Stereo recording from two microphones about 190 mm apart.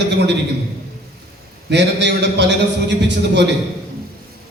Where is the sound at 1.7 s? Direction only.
65° right (ahead or behind).